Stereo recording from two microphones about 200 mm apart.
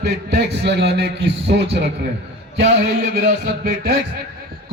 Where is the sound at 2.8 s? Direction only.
55° right (ahead or behind).